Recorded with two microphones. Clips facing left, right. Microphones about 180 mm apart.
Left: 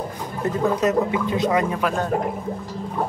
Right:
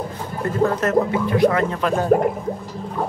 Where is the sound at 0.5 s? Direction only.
15° left (ahead or behind).